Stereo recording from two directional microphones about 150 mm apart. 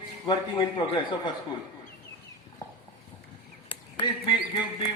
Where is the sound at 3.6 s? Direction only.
30° left (ahead or behind).